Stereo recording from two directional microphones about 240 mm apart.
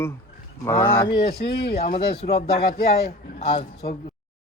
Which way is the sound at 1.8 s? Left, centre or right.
Left.